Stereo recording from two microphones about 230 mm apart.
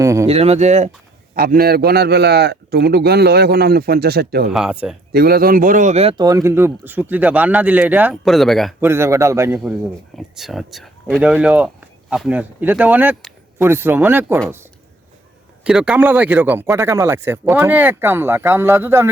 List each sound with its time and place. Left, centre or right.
0.0 s a sound: centre
0.3 s speech: right
1.4 s a man's voice: right
4.4 s speech: centre
5.1 s speech: right; by 8.7 s centre
8.8 s speech: centre
10.2 s speech: centre
15.6 s speech: centre